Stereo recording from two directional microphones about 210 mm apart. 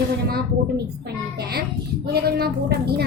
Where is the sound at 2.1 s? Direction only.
50° right (ahead or behind).